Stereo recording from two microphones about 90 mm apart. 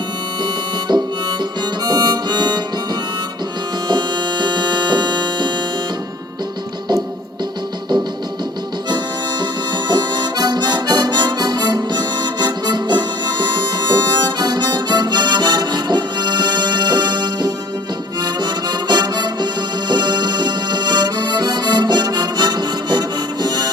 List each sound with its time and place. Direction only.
1.8 s harmonica: 50° right (ahead or behind)
3.8 s music: 55° right (ahead or behind)
9.4 s harmonica: 55° right (ahead or behind)
18.2 s music: 55° right (ahead or behind)
19.9 s accordion: 50° right (ahead or behind)